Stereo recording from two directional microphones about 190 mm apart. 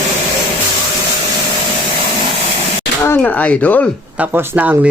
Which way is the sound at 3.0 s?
10° left (ahead or behind).